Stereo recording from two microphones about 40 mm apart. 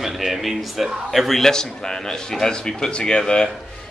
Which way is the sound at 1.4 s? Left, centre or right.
Centre.